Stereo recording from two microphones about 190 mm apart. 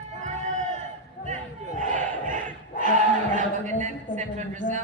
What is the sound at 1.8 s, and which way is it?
Battle cry, 40° right (ahead or behind).